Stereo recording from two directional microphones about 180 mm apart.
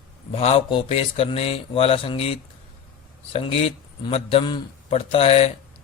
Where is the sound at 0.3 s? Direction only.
35° left (ahead or behind).